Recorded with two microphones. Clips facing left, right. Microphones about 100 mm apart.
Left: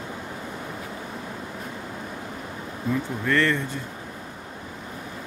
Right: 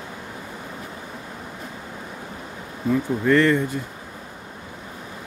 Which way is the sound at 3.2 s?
15° right (ahead or behind).